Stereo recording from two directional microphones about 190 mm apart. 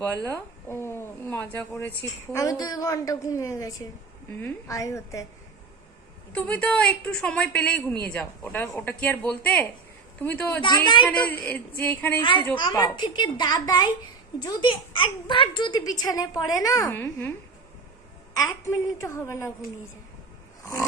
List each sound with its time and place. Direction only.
0.3 s a woman's voice: 15° left (ahead or behind)
6.3 s a woman's voice: 5° left (ahead or behind)
10.6 s a woman's voice: 20° left (ahead or behind)
11.0 s a woman's voice: 5° left (ahead or behind)
12.2 s a woman's voice: 25° left (ahead or behind)
18.3 s a woman's voice: 15° left (ahead or behind)